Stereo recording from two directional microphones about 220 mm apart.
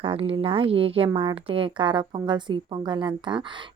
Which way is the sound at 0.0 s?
25° right (ahead or behind).